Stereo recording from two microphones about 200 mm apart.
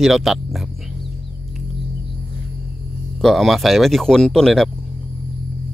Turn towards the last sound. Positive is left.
turn(degrees=0)  # may be behind; listen again after turning